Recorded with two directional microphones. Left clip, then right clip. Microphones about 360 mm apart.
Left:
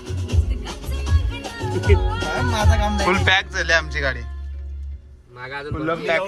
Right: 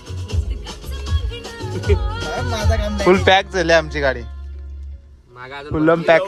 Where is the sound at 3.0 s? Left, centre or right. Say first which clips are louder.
Right 6 dB; centre.